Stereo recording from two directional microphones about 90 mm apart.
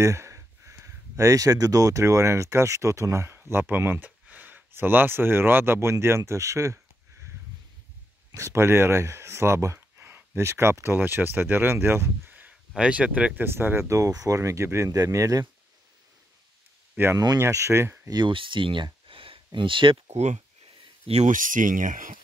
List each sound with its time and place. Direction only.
0.0 s speech: 35° right (ahead or behind)
8.3 s speech: 35° right (ahead or behind); by 13.3 s 15° right (ahead or behind)
13.4 s speech: 25° right (ahead or behind)
16.9 s speech: 25° right (ahead or behind)
18.2 s speech: 70° right (ahead or behind)
19.0 s a sound: 80° right
21.1 s speech: 90° right